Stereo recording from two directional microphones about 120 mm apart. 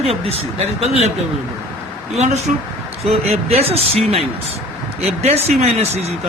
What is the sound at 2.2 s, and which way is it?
Speech, 65° right (ahead or behind).